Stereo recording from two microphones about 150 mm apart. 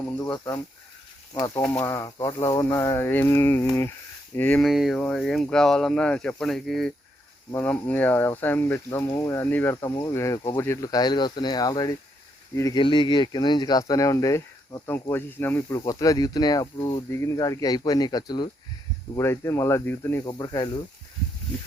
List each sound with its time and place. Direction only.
0.3 s speech: 25° left (ahead or behind)
1.8 s speech: 25° left (ahead or behind)
12.8 s speech: 30° left (ahead or behind); by 20.3 s 15° left (ahead or behind)
20.4 s speech: 30° left (ahead or behind)